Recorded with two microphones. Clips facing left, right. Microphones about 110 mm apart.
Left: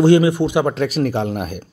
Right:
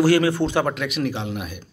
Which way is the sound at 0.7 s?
35° left (ahead or behind).